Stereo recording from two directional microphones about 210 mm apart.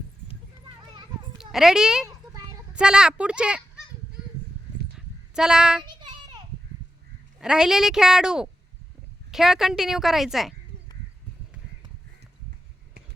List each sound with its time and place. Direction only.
1.4 s a child's voice: centre (ahead or behind)
4.9 s child singing: 5° right (ahead or behind)
5.8 s children playing: 20° right (ahead or behind)
7.3 s a woman's voice: 5° right (ahead or behind)